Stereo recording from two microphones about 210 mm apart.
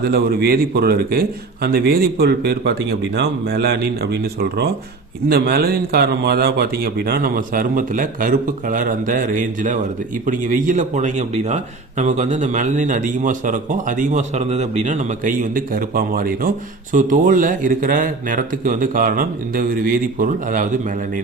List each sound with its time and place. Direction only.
0.0 s a man's voice: 50° right (ahead or behind)